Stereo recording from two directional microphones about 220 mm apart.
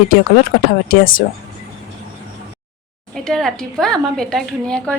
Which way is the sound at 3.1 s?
Centre (ahead or behind).